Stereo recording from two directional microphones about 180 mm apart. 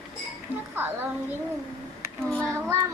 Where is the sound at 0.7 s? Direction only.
10° right (ahead or behind).